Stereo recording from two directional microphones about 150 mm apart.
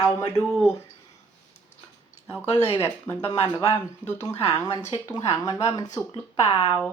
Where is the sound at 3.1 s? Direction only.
15° left (ahead or behind).